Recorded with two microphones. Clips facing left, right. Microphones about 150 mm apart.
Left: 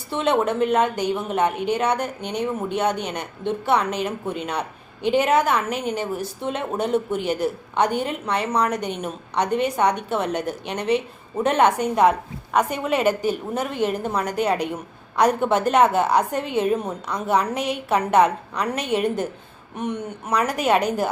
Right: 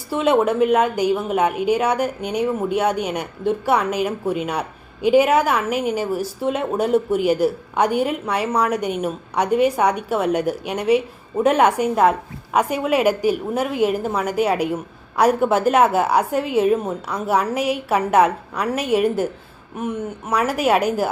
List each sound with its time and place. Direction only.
0.1 s a woman's voice: 5° right (ahead or behind)